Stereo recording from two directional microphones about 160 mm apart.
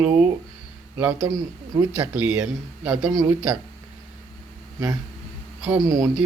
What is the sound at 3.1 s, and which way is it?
Speech, 20° right (ahead or behind).